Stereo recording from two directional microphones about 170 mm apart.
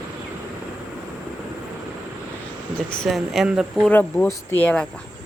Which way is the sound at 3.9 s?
10° left (ahead or behind).